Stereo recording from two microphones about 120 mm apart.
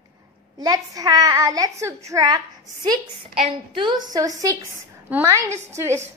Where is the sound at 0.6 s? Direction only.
30° right (ahead or behind).